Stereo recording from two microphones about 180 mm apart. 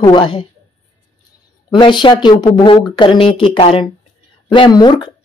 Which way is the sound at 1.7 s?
25° left (ahead or behind).